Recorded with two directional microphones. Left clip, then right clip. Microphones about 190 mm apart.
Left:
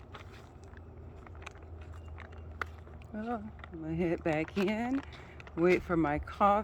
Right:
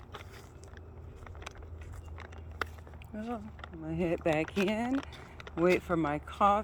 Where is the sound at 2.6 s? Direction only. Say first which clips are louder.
Right 2 dB; 50° right (ahead or behind).